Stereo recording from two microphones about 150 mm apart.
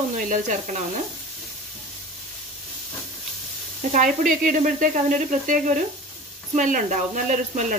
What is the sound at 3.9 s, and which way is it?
Speech, 60° right (ahead or behind).